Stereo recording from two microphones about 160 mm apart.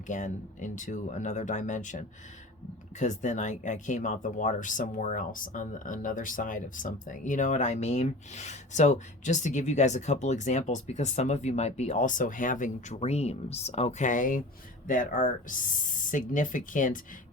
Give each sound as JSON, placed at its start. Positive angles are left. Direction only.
{"t": 0.1, "sound": "speech", "side_deg": 50}